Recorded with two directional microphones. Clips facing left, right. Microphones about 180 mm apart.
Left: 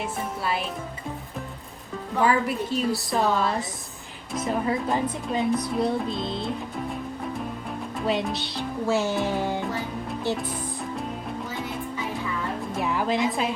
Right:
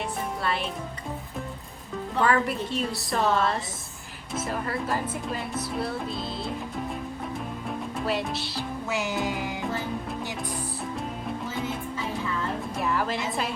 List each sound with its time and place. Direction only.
0.0 s music: centre (ahead or behind)
2.2 s music: centre (ahead or behind)
8.0 s music: centre (ahead or behind)
8.9 s music: 15° right (ahead or behind)
12.7 s a woman's voice: centre (ahead or behind)